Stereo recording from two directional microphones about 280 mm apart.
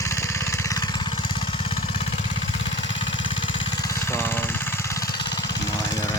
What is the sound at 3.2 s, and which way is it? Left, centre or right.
Vehicle, centre.